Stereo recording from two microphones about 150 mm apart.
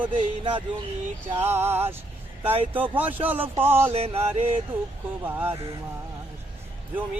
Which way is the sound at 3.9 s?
40° right (ahead or behind).